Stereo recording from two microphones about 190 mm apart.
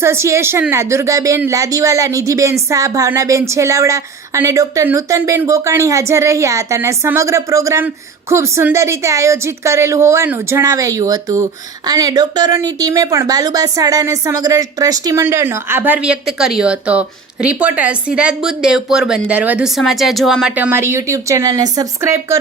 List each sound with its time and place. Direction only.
0.0 s a woman's voice: 15° right (ahead or behind)
20.7 s a woman's voice: 15° right (ahead or behind)